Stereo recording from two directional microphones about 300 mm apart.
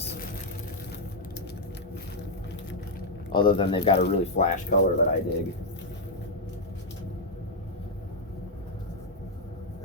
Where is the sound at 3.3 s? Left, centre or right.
Centre.